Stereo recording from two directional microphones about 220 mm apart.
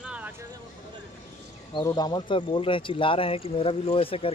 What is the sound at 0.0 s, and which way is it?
Vehicle, 5° right (ahead or behind).